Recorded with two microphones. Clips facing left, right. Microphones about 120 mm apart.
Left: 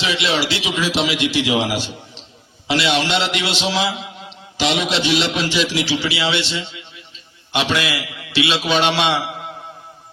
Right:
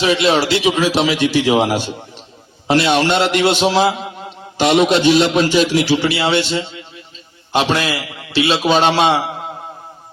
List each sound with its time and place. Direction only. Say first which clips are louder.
0.0 s a man's voice: right 6 dB; 45° right (ahead or behind)